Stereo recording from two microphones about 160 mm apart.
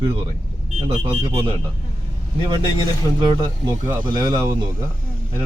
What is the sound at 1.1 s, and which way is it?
Speech, 30° right (ahead or behind).